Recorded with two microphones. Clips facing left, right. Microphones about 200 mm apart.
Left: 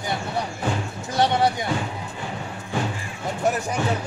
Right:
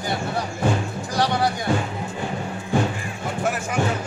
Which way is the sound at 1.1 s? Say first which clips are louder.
Left 2 dB; 25° left (ahead or behind).